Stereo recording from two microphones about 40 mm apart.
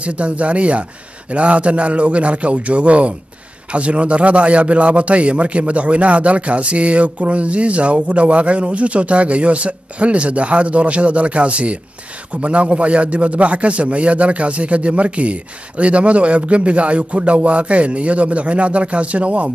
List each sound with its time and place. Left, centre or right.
0.0 s a man's voice: right